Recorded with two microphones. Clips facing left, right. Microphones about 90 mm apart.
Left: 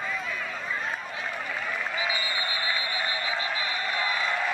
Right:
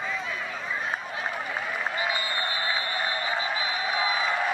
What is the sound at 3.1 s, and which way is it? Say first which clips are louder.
Frog: right 2 dB; 30° right (ahead or behind).